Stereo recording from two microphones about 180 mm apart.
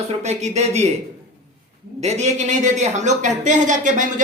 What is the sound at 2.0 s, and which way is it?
Speech, 40° right (ahead or behind).